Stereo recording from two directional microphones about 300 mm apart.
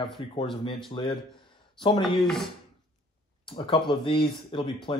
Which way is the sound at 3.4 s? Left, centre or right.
Centre.